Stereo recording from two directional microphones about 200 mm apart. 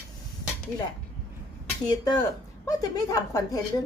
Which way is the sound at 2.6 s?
15° left (ahead or behind).